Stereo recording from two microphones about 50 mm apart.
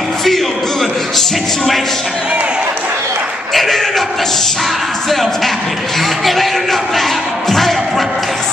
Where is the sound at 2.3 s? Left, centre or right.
Right.